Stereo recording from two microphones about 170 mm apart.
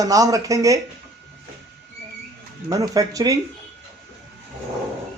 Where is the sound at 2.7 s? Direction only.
20° right (ahead or behind).